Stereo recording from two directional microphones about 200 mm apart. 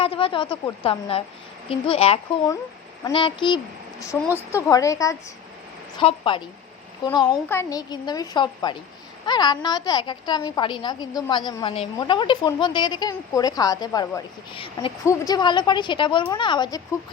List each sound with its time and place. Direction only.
0.0 s a sound: 25° left (ahead or behind)
0.5 s a woman's voice: 25° left (ahead or behind)
4.2 s a woman's voice: 10° left (ahead or behind)